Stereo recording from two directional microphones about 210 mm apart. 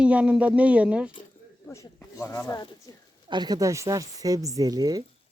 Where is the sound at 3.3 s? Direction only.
20° right (ahead or behind).